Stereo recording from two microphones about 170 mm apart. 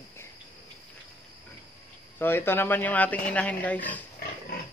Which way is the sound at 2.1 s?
15° left (ahead or behind).